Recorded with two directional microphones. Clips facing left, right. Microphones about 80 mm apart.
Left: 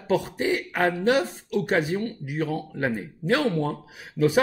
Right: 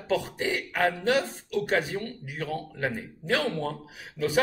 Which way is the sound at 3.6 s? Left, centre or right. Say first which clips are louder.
Left 3 dB; centre.